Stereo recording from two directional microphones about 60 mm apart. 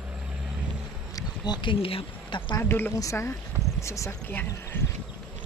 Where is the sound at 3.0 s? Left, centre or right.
Left.